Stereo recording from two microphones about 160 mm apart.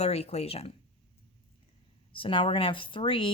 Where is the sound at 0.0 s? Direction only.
40° left (ahead or behind).